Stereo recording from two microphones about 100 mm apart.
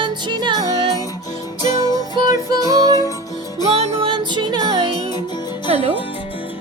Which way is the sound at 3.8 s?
65° right (ahead or behind).